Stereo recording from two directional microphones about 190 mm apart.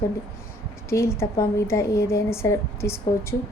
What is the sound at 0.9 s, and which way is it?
Speech, 15° left (ahead or behind).